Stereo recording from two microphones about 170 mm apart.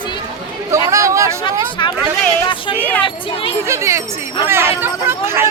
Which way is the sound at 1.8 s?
25° left (ahead or behind).